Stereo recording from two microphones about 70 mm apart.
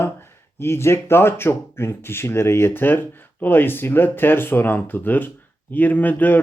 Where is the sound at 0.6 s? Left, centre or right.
Left.